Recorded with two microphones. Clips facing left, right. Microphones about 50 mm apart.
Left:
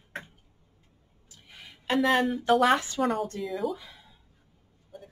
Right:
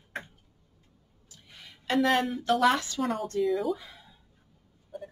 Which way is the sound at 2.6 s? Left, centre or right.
Left.